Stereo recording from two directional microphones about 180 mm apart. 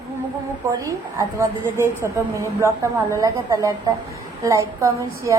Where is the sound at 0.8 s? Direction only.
15° right (ahead or behind).